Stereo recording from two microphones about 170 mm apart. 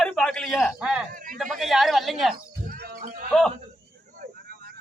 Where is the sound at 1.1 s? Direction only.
55° right (ahead or behind).